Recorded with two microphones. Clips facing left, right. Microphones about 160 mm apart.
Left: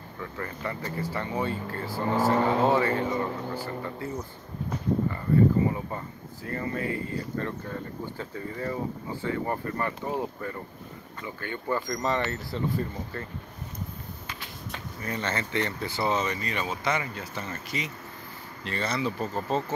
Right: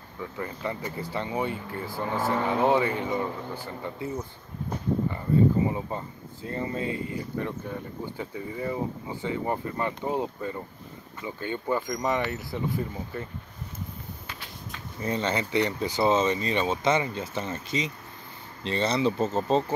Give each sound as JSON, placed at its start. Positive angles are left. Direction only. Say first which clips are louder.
{"t": 0.2, "sound": "speech", "louder": "right 2 dB", "side_deg": -15}
{"t": 5.7, "sound": "speech", "louder": "right 1 dB", "side_deg": -20}
{"t": 15.0, "sound": "speech", "louder": "right 4 dB", "side_deg": -25}